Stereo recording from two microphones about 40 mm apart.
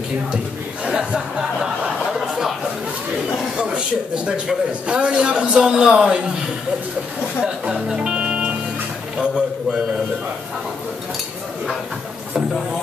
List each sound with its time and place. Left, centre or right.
0.8 s chuckle: right
2.1 s a sound: centre
3.5 s a man's voice: right
7.9 s music: right
9.2 s a man's voice: right